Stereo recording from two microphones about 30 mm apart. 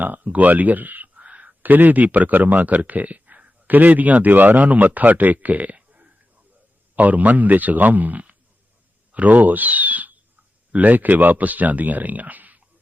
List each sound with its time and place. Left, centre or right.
0.0 s speech: right
1.2 s a sound: right
1.6 s speech: right
2.0 s speech: right
2.6 s speech: right
3.7 s speech: right
6.9 s speech: right